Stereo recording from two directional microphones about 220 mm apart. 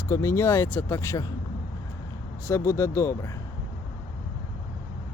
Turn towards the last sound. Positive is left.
turn(degrees=15)  # may be behind; listen again after turning